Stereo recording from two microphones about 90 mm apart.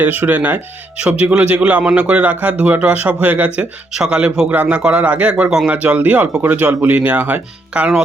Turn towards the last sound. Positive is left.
turn(degrees=-15)  # may be behind; listen again after turning